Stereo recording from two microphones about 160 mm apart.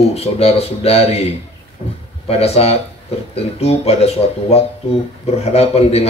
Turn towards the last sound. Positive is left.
turn(degrees=40)  # may be behind; listen again after turning